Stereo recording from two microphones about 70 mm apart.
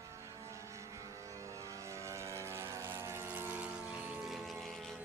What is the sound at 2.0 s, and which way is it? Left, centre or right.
Vehicle, right.